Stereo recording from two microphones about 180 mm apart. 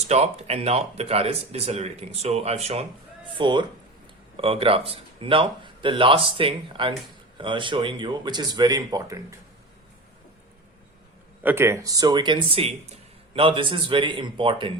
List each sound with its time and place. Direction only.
0.1 s speech: 35° right (ahead or behind); by 9.2 s 20° right (ahead or behind)
11.4 s speech: 15° right (ahead or behind)